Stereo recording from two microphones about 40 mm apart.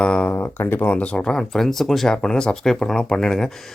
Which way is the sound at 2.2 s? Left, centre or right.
Centre.